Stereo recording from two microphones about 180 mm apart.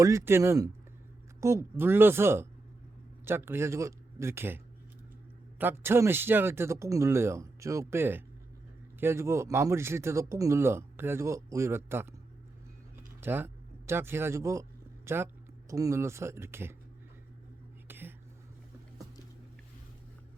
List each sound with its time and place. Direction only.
0.0 s speech: 15° right (ahead or behind)
13.0 s a sound: 10° right (ahead or behind)
15.7 s speech: 20° right (ahead or behind)
17.8 s whispering: 10° right (ahead or behind)